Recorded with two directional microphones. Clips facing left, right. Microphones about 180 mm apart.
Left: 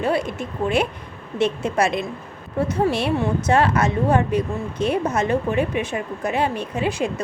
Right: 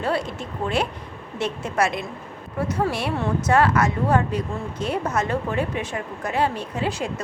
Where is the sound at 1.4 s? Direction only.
25° left (ahead or behind).